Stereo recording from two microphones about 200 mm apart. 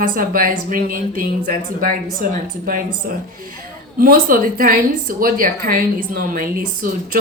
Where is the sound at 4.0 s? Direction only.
45° right (ahead or behind).